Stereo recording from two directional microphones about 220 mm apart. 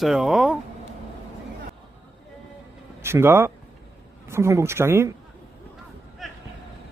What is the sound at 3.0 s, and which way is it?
Speech, 10° right (ahead or behind).